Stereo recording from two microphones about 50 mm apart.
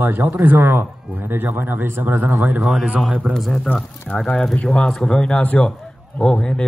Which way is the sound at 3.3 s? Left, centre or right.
Centre.